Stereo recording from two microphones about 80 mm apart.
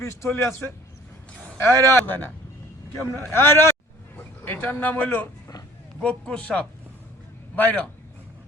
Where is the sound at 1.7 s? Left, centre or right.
Right.